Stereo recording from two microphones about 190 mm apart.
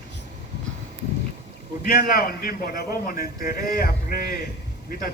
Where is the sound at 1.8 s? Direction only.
50° left (ahead or behind).